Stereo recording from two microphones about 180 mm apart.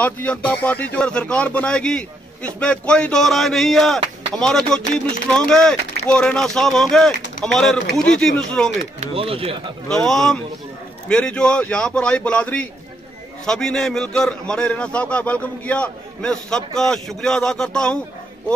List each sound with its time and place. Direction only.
0.0 s a man's voice: 10° left (ahead or behind)
9.0 s speech: 30° right (ahead or behind)
9.8 s a man's voice: 5° left (ahead or behind)